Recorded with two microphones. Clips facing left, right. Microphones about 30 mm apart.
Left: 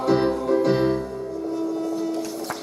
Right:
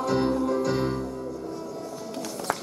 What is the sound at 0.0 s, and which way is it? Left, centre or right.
Music, centre.